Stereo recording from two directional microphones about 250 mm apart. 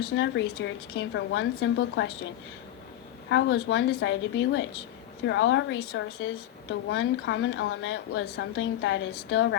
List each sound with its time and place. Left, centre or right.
0.2 s a woman's voice: left